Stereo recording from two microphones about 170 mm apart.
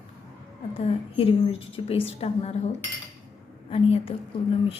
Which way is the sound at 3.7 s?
35° left (ahead or behind).